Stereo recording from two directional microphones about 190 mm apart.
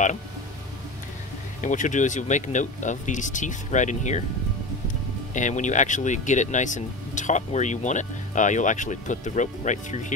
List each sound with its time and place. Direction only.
1.6 s speech: 40° left (ahead or behind)
5.3 s speech: 40° left (ahead or behind)